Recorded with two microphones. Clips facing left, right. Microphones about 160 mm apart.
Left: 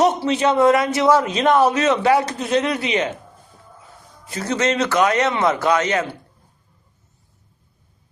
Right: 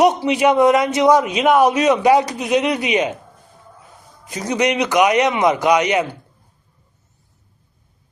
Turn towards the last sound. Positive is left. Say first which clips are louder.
# right 3 dB
turn(degrees=-15)  # may be behind; listen again after turning